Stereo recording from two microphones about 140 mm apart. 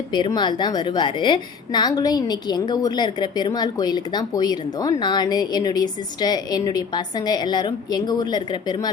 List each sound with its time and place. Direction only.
0.1 s a woman's voice: 30° left (ahead or behind)